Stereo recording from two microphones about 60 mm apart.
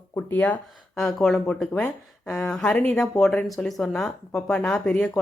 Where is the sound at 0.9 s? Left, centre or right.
Centre.